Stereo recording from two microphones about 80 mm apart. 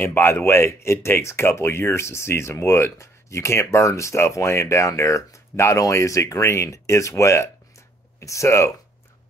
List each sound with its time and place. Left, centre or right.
0.0 s speech: left